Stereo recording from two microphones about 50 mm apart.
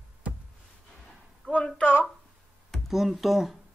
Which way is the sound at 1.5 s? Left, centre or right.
Left.